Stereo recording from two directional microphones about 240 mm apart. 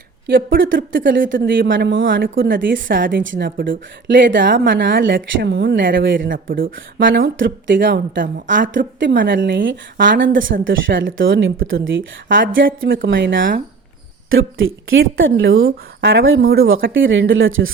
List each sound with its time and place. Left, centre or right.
0.3 s a woman's voice: right
6.2 s a woman's voice: right